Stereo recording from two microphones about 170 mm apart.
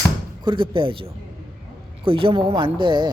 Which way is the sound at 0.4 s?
30° right (ahead or behind).